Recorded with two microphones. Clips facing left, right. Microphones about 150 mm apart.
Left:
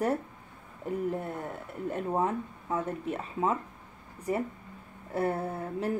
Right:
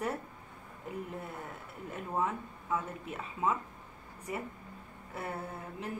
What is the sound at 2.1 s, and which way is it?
Speech, 35° left (ahead or behind).